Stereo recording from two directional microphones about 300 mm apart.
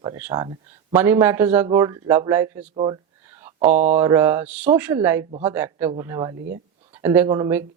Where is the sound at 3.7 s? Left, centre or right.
Right.